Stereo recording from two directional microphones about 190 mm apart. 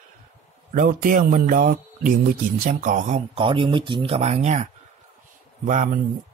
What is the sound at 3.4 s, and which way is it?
Speech, 25° right (ahead or behind).